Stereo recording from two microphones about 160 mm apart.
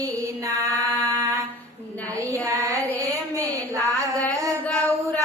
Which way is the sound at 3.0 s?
20° right (ahead or behind).